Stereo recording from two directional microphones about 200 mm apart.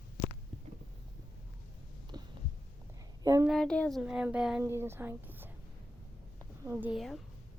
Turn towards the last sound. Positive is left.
turn(degrees=0)  # may be behind; listen again after turning